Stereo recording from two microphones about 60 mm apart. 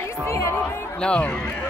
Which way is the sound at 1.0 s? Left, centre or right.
Centre.